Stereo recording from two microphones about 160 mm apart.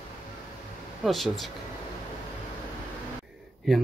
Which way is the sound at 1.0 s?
Centre (ahead or behind).